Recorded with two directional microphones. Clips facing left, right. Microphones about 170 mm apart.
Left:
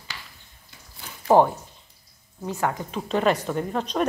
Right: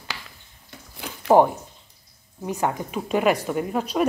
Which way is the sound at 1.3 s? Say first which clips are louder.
Right 1 dB; 10° right (ahead or behind).